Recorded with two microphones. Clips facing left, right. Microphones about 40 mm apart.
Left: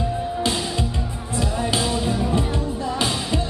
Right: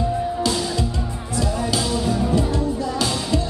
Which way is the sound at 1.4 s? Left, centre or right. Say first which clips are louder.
Even; left.